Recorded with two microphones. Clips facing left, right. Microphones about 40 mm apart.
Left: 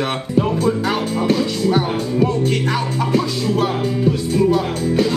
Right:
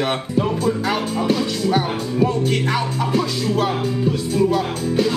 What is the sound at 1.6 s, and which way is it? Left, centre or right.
A man's voice, centre.